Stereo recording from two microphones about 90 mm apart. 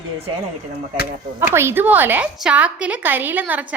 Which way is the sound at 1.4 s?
30° right (ahead or behind).